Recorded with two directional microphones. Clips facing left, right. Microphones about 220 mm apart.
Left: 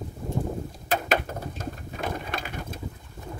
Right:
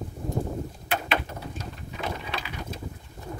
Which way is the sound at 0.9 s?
45° left (ahead or behind).